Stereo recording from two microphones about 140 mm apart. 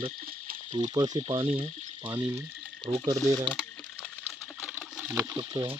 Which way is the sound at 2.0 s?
15° right (ahead or behind).